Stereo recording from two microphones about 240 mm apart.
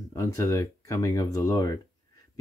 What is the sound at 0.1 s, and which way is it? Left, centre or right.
Speech, centre.